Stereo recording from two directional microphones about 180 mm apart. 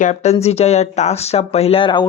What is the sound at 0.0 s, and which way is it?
Speech, 40° left (ahead or behind).